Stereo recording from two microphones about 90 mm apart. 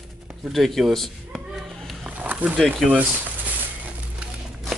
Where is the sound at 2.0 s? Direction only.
15° right (ahead or behind).